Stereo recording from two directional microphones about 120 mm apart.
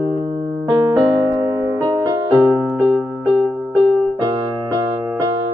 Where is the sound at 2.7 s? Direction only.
20° right (ahead or behind).